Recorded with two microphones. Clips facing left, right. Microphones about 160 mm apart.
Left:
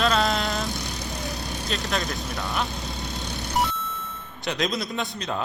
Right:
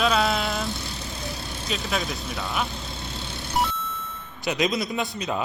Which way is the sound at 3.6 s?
Centre (ahead or behind).